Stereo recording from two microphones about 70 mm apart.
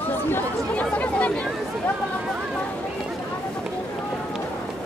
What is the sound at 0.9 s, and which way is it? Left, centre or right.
Chatter, left.